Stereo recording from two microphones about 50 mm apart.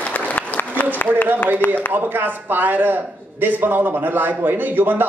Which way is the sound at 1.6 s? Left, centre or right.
Left.